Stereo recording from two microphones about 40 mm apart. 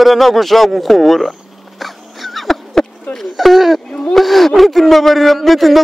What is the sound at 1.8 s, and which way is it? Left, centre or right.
Dog, centre.